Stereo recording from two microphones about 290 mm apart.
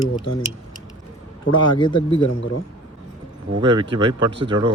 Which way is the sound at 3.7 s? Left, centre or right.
Centre.